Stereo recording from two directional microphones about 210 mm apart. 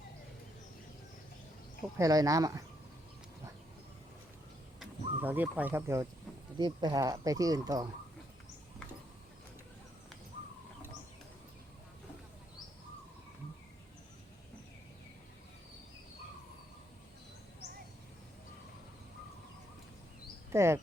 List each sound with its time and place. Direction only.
2.0 s speech: 15° right (ahead or behind)
4.8 s speech: 10° right (ahead or behind)
20.5 s speech: 10° right (ahead or behind)